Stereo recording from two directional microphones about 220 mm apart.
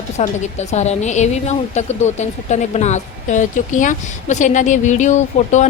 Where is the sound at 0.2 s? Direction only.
30° left (ahead or behind).